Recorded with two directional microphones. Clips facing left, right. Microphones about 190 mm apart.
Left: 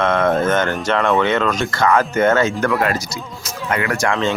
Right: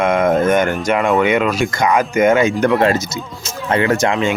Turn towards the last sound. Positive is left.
turn(degrees=-20)  # may be behind; listen again after turning